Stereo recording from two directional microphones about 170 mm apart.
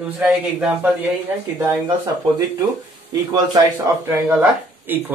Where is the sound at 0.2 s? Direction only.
10° right (ahead or behind).